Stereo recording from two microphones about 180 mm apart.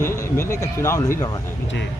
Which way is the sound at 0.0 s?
15° left (ahead or behind).